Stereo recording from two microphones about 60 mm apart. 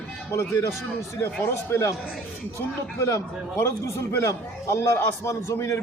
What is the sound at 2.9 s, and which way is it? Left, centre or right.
A man's voice, left.